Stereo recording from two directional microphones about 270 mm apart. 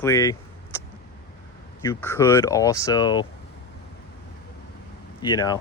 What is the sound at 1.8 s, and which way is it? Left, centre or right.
Speech, centre.